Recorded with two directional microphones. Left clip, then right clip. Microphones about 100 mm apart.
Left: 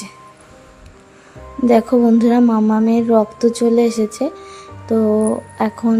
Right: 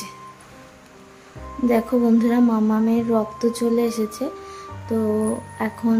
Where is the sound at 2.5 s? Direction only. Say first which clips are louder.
Left 5 dB; 30° left (ahead or behind).